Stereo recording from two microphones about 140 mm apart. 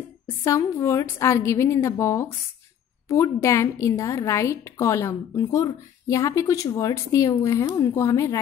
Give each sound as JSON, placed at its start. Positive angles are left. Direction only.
{"t": 0.5, "sound": "a woman's voice", "side_deg": 20}